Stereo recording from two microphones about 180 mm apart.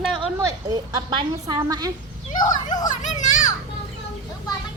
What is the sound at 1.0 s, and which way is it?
Speech, 25° right (ahead or behind).